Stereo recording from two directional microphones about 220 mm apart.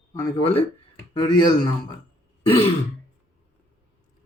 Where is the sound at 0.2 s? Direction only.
20° left (ahead or behind).